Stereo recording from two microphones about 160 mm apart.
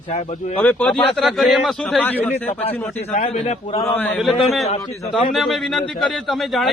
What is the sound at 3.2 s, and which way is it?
Speech, 40° left (ahead or behind).